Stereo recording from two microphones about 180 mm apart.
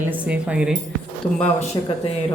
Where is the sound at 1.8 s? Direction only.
25° left (ahead or behind).